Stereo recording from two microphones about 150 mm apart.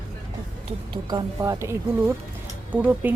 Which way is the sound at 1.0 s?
25° right (ahead or behind).